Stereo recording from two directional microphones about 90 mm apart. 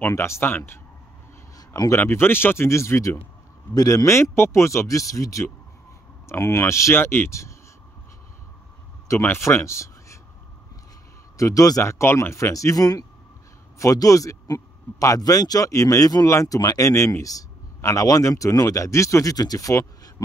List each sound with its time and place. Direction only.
0.0 s speech: 30° left (ahead or behind)
2.0 s a man's voice: 25° left (ahead or behind)
9.2 s speech: 25° left (ahead or behind)
11.3 s a man's voice: 40° left (ahead or behind)